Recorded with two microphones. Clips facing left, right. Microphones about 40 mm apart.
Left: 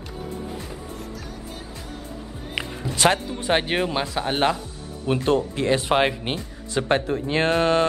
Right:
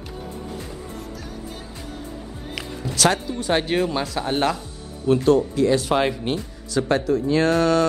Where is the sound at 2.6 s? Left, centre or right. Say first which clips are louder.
Even; left.